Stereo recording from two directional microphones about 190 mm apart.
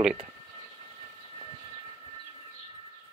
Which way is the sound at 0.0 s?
5° right (ahead or behind).